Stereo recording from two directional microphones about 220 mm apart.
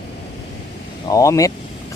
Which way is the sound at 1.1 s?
15° left (ahead or behind).